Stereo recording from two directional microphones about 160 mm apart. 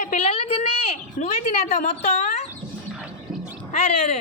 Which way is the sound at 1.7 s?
50° left (ahead or behind).